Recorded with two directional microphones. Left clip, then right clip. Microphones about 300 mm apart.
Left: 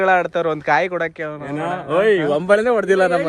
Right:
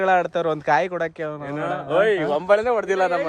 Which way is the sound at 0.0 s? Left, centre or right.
Centre.